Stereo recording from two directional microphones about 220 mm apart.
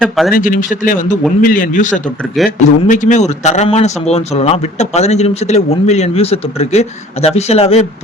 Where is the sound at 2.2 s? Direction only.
Centre (ahead or behind).